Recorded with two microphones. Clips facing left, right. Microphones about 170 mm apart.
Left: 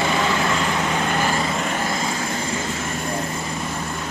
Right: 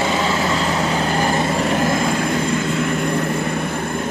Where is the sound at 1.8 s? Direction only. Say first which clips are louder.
Right 6 dB; 55° right (ahead or behind).